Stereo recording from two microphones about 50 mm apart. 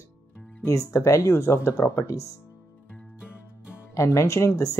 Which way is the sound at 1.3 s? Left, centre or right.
Left.